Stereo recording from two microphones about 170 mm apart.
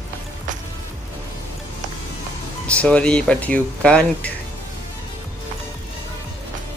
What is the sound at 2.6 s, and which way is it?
Speech, 5° left (ahead or behind).